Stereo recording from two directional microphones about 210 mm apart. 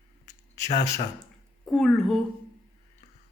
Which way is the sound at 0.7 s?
35° left (ahead or behind).